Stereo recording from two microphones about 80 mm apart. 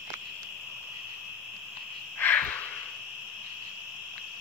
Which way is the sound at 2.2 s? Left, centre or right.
Left.